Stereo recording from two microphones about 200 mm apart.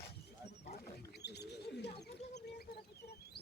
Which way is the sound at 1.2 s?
55° left (ahead or behind).